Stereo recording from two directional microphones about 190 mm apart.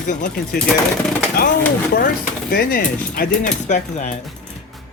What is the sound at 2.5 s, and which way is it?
Speech, 50° left (ahead or behind).